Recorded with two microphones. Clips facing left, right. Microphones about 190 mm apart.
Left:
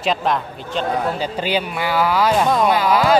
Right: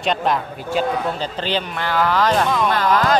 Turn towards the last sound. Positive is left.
turn(degrees=10)  # may be behind; listen again after turning